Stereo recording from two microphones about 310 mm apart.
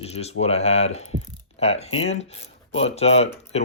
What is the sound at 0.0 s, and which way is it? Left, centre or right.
Speech, centre.